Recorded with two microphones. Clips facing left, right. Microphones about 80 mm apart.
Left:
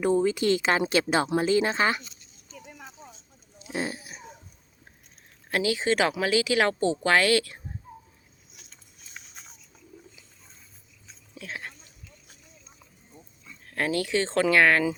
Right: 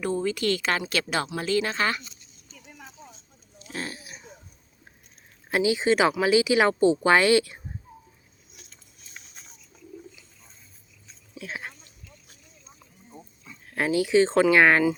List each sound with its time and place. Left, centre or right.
0.0 s speech: centre
2.7 s a sound: centre
5.5 s speech: centre
11.3 s speech: centre
13.4 s speech: centre